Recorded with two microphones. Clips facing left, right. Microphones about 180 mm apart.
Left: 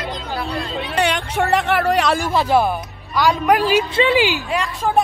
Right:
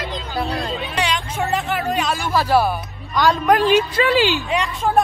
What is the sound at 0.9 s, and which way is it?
Music, 55° left (ahead or behind).